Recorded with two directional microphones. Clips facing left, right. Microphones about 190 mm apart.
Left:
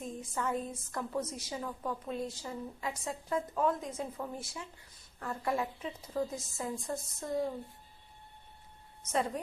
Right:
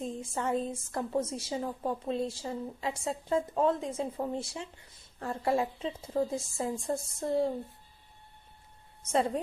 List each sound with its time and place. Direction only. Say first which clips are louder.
0.0 s a woman's voice: right 3 dB; 25° right (ahead or behind)